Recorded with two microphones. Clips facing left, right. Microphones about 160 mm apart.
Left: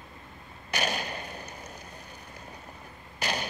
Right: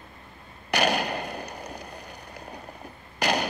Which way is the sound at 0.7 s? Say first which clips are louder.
Right 7 dB; 70° right (ahead or behind).